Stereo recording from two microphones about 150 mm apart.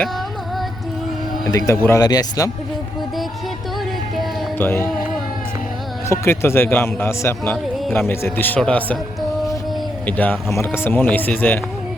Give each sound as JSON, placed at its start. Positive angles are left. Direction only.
{"t": 1.5, "sound": "speech", "side_deg": 20}
{"t": 4.5, "sound": "speech", "side_deg": 15}
{"t": 6.1, "sound": "speech", "side_deg": 15}
{"t": 10.1, "sound": "speech", "side_deg": 10}